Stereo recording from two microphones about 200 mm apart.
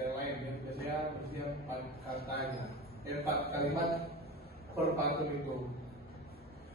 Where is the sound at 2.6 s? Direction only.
50° right (ahead or behind).